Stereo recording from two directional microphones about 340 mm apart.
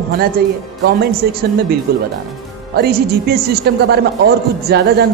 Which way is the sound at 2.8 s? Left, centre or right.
Right.